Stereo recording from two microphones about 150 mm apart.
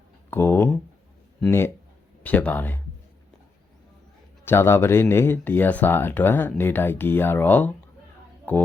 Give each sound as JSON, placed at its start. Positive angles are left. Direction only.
{"t": 0.3, "sound": "a sound", "side_deg": 15}
{"t": 1.5, "sound": "speech", "side_deg": 15}
{"t": 4.4, "sound": "speech", "side_deg": 15}